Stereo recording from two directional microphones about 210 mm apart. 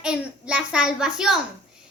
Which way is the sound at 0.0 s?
5° right (ahead or behind).